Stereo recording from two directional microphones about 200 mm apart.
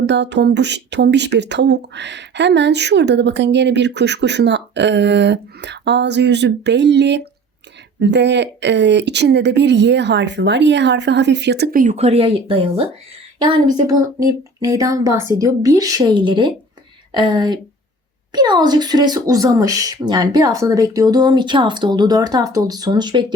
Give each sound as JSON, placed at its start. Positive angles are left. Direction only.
{"t": 0.0, "sound": "speech", "side_deg": -60}